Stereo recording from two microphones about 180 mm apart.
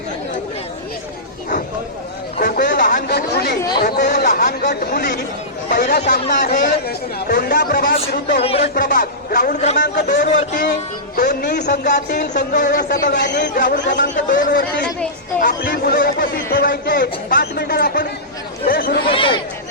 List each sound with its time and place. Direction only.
2.7 s a sound: 45° left (ahead or behind)
3.1 s chatter: 65° left (ahead or behind)
3.8 s speech: 55° left (ahead or behind)
6.0 s speech: 45° left (ahead or behind)
8.4 s speech: 35° left (ahead or behind)
8.6 s speech: 50° left (ahead or behind)
9.9 s speech: 60° left (ahead or behind)
10.2 s speech: 45° left (ahead or behind); by 13.5 s 70° left (ahead or behind)
13.5 s speech: 45° left (ahead or behind)
13.8 s a man's voice: 75° left (ahead or behind)
14.3 s speech: 50° left (ahead or behind)
19.1 s speech: 30° left (ahead or behind)